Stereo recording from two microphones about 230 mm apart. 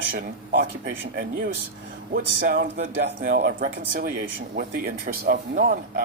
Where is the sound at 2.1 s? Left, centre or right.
Right.